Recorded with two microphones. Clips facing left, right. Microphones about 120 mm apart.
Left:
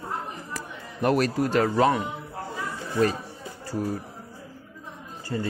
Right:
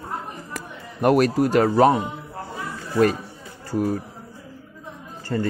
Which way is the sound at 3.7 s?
60° right (ahead or behind).